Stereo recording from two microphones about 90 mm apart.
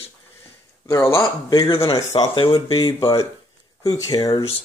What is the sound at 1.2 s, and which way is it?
Speech, 45° left (ahead or behind).